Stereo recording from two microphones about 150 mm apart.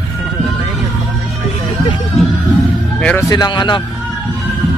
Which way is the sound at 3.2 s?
25° left (ahead or behind).